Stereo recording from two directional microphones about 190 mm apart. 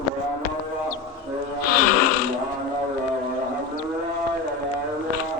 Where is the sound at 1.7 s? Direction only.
45° left (ahead or behind).